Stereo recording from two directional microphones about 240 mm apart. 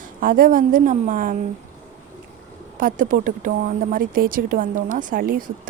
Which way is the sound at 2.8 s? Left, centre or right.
Right.